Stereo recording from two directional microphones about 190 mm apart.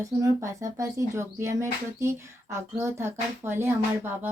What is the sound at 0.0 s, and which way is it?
Speech, 15° right (ahead or behind).